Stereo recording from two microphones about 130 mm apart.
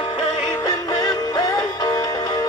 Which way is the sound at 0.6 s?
30° left (ahead or behind).